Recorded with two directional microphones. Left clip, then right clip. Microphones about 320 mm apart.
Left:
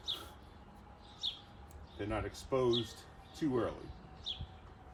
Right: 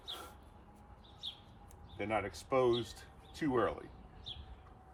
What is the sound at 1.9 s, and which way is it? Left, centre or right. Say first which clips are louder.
Speech: right 3 dB; centre.